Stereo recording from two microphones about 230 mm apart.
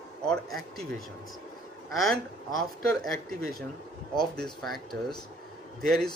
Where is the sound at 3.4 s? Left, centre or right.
Right.